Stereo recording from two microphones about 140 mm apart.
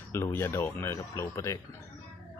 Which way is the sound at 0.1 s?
20° left (ahead or behind).